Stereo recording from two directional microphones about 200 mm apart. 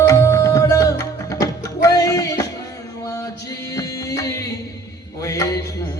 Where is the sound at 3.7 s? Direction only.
15° left (ahead or behind).